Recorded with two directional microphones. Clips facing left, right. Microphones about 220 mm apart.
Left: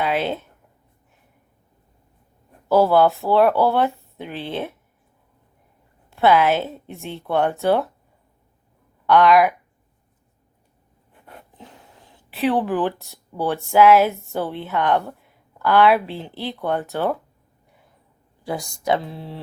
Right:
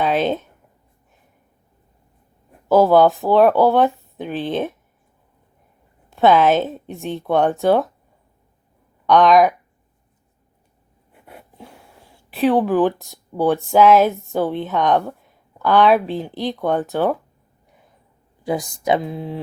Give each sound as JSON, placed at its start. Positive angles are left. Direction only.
{"t": 0.0, "sound": "speech", "side_deg": -20}
{"t": 2.6, "sound": "speech", "side_deg": -15}
{"t": 6.1, "sound": "speech", "side_deg": -15}
{"t": 11.1, "sound": "a sound", "side_deg": -10}
{"t": 12.5, "sound": "speech", "side_deg": -15}
{"t": 18.4, "sound": "speech", "side_deg": -20}